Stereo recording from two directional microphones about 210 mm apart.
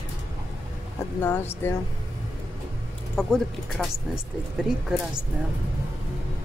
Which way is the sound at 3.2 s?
Centre (ahead or behind).